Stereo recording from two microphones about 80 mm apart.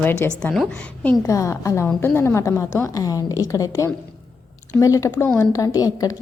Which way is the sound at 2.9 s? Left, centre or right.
Left.